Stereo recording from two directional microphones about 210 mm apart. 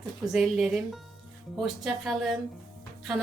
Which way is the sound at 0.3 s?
Centre (ahead or behind).